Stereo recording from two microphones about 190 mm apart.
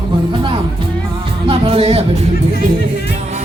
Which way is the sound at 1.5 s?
30° right (ahead or behind).